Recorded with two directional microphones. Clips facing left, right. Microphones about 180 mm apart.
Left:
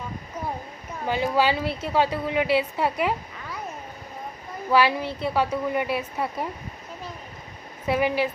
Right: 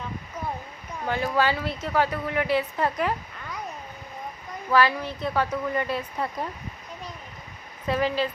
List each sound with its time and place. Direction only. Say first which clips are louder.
1.0 s speech: left 2 dB; 15° left (ahead or behind)
4.7 s speech: left 1 dB; 15° left (ahead or behind)
7.9 s speech: left 2 dB; 10° left (ahead or behind)